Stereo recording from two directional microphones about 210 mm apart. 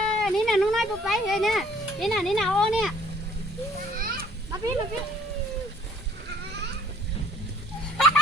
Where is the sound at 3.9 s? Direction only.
45° right (ahead or behind).